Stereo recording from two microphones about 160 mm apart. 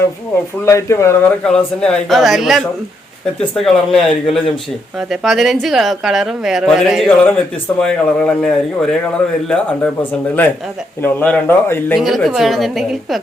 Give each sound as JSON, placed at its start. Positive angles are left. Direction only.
{"t": 0.6, "sound": "speech", "side_deg": 20}
{"t": 1.5, "sound": "a woman's voice", "side_deg": 5}
{"t": 11.9, "sound": "a woman's voice", "side_deg": 0}